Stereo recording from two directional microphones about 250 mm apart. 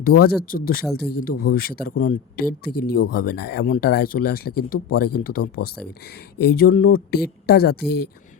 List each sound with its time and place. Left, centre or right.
0.0 s speech: left
5.4 s speech: left
6.4 s speech: left